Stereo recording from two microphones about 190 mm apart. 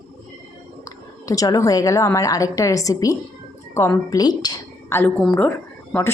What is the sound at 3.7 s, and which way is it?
A woman's voice, 15° left (ahead or behind).